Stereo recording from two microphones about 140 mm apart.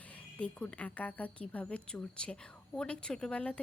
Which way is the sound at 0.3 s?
10° left (ahead or behind).